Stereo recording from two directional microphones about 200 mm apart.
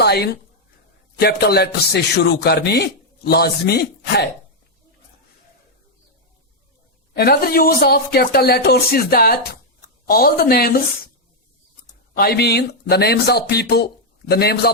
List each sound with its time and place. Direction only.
0.0 s a sound: 55° left (ahead or behind)
1.2 s a man's voice: 50° left (ahead or behind)
7.1 s a man's voice: 50° left (ahead or behind)
12.1 s a man's voice: 50° left (ahead or behind)